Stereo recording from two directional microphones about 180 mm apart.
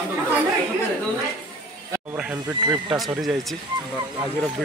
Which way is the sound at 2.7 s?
5° right (ahead or behind).